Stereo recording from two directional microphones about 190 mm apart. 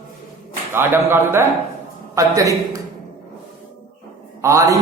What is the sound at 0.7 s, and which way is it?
A man's voice, 10° right (ahead or behind).